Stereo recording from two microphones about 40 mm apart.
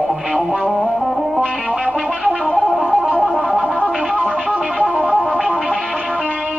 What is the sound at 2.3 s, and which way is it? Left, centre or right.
Music, left.